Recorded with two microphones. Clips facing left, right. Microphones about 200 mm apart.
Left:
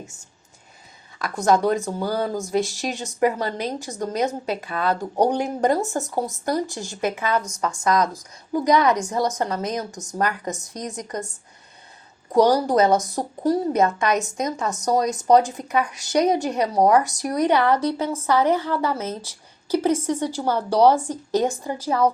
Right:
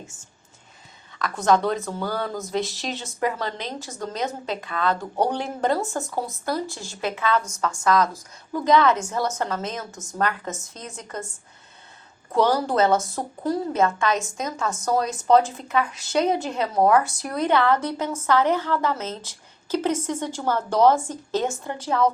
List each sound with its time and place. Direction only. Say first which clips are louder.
1.5 s a woman's voice: left 2 dB; 10° left (ahead or behind)
2.6 s speech: left 3 dB; 45° left (ahead or behind)
3.2 s a woman's voice: left 5 dB; 15° left (ahead or behind)
12.3 s a woman's voice: left 4 dB; 15° left (ahead or behind)